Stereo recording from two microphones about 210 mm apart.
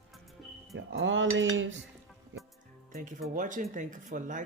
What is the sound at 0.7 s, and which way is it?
Speech, 65° right (ahead or behind).